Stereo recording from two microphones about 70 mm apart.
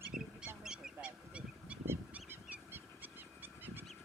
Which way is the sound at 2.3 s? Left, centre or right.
Right.